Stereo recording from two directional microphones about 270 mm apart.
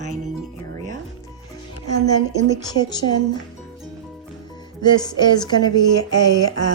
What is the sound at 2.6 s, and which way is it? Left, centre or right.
Speech, centre.